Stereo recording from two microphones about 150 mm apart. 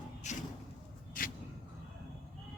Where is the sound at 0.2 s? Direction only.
50° left (ahead or behind).